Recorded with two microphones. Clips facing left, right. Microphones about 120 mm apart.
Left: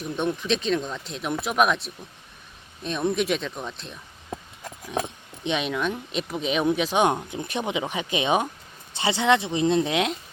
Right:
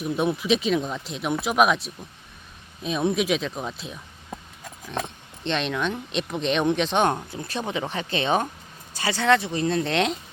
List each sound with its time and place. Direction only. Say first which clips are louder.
0.0 s speech: right 3 dB; 5° right (ahead or behind)
4.9 s speech: left 2 dB; 10° left (ahead or behind)
9.9 s speech: right 1 dB; 5° left (ahead or behind)